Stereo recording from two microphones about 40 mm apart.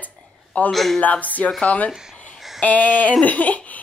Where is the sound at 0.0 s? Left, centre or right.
Left.